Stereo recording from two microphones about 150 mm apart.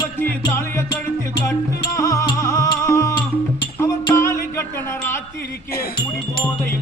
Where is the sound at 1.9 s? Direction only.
20° left (ahead or behind).